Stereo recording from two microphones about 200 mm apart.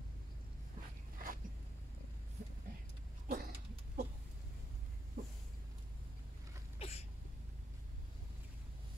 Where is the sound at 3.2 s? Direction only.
50° right (ahead or behind).